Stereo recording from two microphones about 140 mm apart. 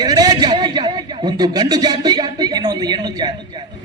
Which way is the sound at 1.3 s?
30° right (ahead or behind).